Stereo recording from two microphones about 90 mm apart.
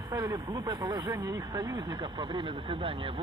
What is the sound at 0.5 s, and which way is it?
Speech, 50° right (ahead or behind).